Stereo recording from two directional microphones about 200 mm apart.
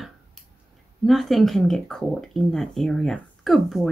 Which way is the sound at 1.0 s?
Centre (ahead or behind).